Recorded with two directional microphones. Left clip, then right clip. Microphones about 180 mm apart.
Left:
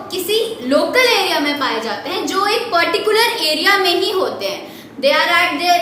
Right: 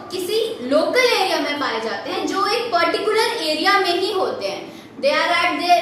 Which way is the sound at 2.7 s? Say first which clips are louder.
Left 4 dB; 20° left (ahead or behind).